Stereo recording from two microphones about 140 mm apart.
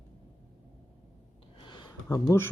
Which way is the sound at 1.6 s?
35° left (ahead or behind).